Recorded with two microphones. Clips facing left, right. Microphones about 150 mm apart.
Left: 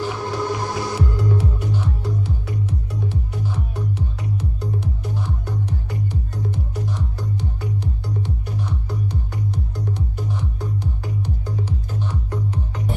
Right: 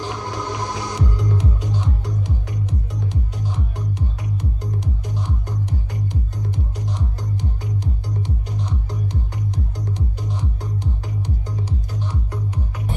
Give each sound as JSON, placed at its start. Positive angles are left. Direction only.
{"t": 0.0, "sound": "music", "side_deg": -15}
{"t": 9.0, "sound": "music", "side_deg": 60}
{"t": 9.9, "sound": "music", "side_deg": -15}